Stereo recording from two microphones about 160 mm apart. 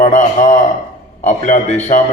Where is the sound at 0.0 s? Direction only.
45° left (ahead or behind).